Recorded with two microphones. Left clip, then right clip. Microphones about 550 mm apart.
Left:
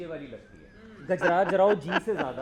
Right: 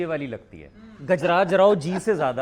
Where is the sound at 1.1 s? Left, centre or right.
Right.